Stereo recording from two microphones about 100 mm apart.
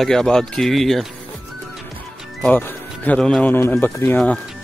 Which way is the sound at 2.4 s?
20° left (ahead or behind).